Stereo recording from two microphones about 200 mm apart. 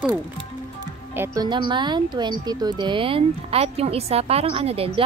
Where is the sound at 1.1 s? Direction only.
15° right (ahead or behind).